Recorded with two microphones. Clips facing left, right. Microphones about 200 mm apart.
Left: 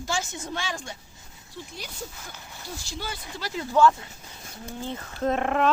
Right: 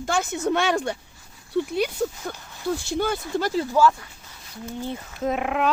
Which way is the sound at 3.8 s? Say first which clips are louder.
Even; 10° right (ahead or behind).